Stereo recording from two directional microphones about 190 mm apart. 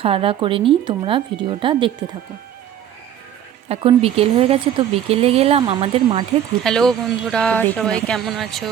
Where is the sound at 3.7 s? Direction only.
30° right (ahead or behind).